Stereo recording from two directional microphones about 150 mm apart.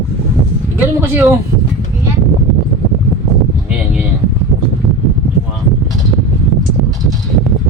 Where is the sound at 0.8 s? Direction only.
15° right (ahead or behind).